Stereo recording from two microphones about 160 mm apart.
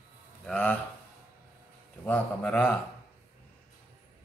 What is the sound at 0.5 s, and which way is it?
Speech, 10° left (ahead or behind).